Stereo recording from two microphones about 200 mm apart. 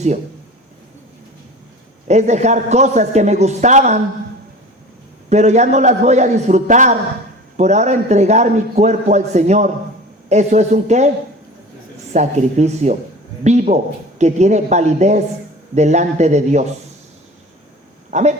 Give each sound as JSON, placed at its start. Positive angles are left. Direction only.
{"t": 2.0, "sound": "a man's voice", "side_deg": -35}
{"t": 5.3, "sound": "a man's voice", "side_deg": -35}
{"t": 12.1, "sound": "a man's voice", "side_deg": -35}
{"t": 18.1, "sound": "speech", "side_deg": -35}